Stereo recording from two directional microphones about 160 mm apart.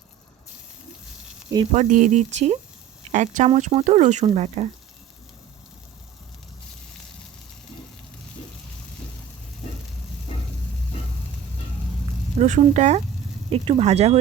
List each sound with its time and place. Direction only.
1.7 s speech: 50° right (ahead or behind)
12.4 s speech: 45° right (ahead or behind)